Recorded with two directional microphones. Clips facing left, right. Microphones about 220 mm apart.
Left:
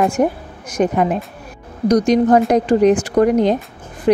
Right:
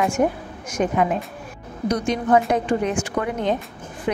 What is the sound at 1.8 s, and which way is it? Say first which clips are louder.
Speech: left 9 dB; 40° left (ahead or behind).